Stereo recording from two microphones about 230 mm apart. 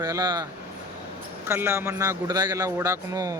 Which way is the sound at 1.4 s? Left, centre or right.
Centre.